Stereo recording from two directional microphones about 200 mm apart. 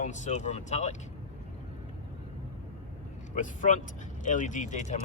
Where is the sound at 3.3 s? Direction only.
40° left (ahead or behind).